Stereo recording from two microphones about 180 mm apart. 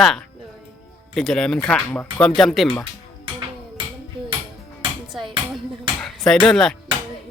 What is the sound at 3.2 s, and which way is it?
Music, 30° right (ahead or behind).